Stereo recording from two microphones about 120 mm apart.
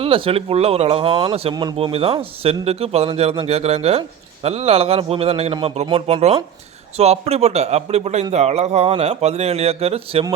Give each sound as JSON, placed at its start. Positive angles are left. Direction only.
{"t": 0.0, "sound": "speech", "side_deg": -50}
{"t": 1.5, "sound": "speech", "side_deg": -35}
{"t": 1.9, "sound": "a man's voice", "side_deg": -55}